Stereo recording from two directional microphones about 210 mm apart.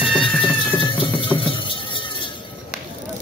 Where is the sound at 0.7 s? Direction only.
25° left (ahead or behind).